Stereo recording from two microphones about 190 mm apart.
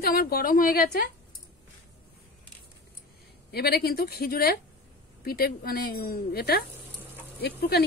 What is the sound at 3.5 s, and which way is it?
Speech, 55° left (ahead or behind).